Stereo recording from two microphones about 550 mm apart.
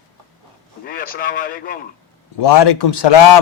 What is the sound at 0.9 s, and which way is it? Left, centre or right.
Speech, centre.